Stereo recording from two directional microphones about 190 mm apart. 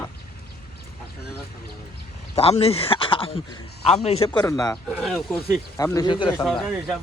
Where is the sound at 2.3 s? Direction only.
30° left (ahead or behind).